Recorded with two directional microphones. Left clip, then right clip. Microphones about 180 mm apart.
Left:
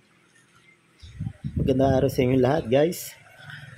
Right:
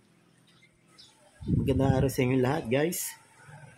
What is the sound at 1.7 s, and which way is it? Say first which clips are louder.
Speech: left 7 dB; 15° left (ahead or behind).